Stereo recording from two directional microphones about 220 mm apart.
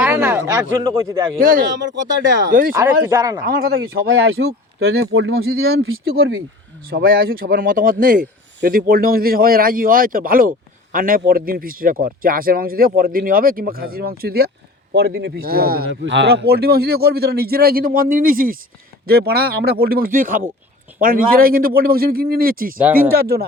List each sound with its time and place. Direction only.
0.0 s a sound: 10° right (ahead or behind)
1.4 s speech: 40° right (ahead or behind)
2.7 s speech: 15° right (ahead or behind)
3.4 s speech: 45° right (ahead or behind)
4.1 s speech: 70° right (ahead or behind); by 5.8 s 50° right (ahead or behind)
6.8 s speech: 40° right (ahead or behind)